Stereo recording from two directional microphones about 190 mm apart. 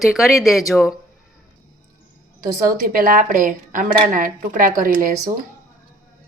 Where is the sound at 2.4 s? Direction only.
50° right (ahead or behind).